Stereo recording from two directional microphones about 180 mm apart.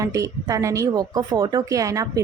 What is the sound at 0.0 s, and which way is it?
A woman's voice, 20° right (ahead or behind).